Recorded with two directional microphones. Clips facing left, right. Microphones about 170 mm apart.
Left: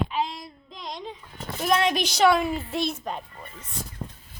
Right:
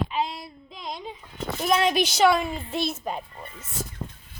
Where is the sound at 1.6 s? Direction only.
Centre (ahead or behind).